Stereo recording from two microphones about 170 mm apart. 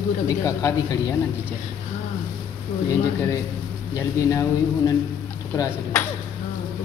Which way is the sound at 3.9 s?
20° left (ahead or behind).